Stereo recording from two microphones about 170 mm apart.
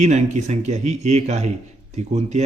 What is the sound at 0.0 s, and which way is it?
A man's voice, 40° right (ahead or behind).